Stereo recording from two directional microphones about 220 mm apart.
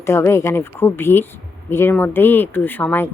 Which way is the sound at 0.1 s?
10° left (ahead or behind).